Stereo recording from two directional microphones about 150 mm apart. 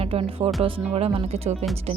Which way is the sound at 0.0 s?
40° right (ahead or behind).